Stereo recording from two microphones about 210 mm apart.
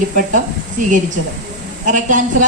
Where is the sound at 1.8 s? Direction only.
35° right (ahead or behind).